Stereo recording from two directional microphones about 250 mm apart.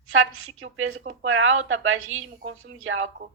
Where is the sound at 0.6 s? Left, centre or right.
Right.